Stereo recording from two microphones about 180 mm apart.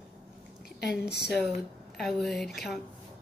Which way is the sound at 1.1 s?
65° left (ahead or behind).